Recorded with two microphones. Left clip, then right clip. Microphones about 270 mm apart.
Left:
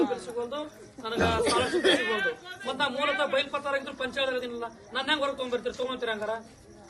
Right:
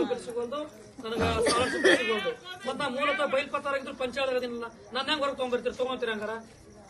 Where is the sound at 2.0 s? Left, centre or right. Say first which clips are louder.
Left 1 dB; left.